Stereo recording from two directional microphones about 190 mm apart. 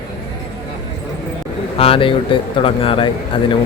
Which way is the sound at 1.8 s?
30° left (ahead or behind).